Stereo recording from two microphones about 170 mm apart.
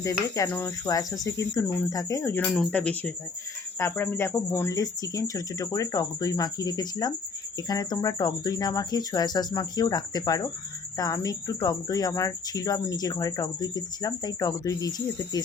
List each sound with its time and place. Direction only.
0.0 s speech: 20° left (ahead or behind)